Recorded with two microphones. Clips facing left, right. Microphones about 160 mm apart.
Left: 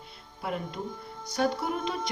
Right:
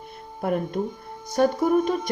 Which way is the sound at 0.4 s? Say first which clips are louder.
Right 9 dB; 50° right (ahead or behind).